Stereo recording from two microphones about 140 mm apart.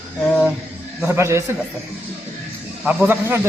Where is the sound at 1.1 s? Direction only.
20° right (ahead or behind).